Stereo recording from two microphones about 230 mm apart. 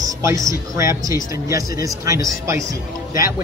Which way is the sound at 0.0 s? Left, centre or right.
Centre.